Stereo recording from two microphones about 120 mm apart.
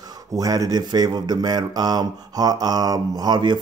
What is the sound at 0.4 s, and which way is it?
Speech, 30° right (ahead or behind).